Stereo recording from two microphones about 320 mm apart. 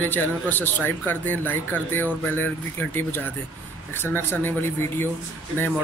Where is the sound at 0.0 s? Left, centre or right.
Centre.